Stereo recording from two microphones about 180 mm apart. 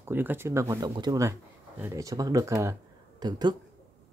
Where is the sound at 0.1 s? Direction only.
10° right (ahead or behind).